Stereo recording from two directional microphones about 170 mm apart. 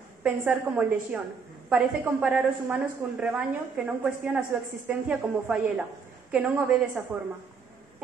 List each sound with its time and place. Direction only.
0.2 s a woman's voice: 5° right (ahead or behind)